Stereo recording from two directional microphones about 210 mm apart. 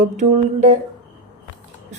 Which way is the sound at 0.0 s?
35° right (ahead or behind).